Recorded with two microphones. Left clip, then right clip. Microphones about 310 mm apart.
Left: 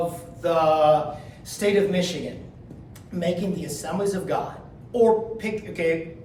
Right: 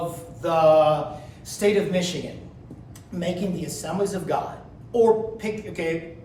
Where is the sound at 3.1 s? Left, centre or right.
Centre.